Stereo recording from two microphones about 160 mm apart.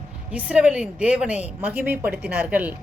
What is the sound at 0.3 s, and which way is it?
A woman's voice, 5° right (ahead or behind).